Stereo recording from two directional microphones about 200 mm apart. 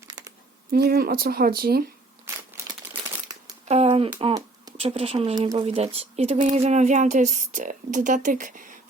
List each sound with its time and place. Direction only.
0.7 s speech: 50° right (ahead or behind)
2.2 s crumpling: 15° right (ahead or behind)
3.7 s a sound: 30° right (ahead or behind)
4.8 s speech: 30° right (ahead or behind)